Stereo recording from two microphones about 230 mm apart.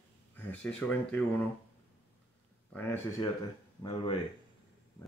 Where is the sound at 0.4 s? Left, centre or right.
Centre.